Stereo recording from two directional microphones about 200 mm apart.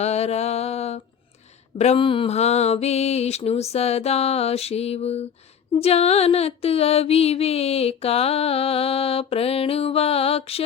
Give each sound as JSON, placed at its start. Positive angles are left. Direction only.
{"t": 0.0, "sound": "a sound", "side_deg": 30}
{"t": 1.8, "sound": "mantra", "side_deg": 30}
{"t": 5.8, "sound": "music", "side_deg": 30}